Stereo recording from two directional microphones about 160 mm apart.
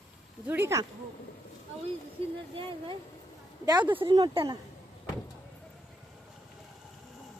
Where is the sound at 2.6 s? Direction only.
30° right (ahead or behind).